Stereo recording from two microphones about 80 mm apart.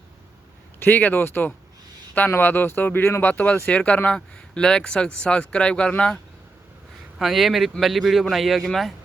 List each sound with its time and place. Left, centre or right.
0.8 s speech: left
7.2 s speech: centre